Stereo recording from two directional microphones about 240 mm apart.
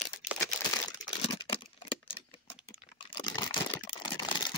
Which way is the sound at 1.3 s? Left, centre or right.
Centre.